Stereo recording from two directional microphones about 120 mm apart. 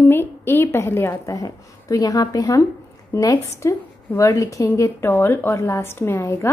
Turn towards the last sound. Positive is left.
turn(degrees=15)  # may be behind; listen again after turning